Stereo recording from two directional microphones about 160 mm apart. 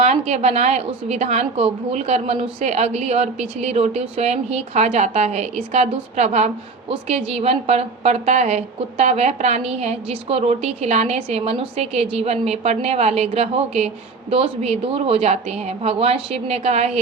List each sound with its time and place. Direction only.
0.0 s a woman's voice: 40° right (ahead or behind)